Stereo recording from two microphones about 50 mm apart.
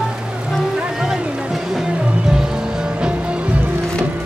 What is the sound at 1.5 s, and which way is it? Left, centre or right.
Music, centre.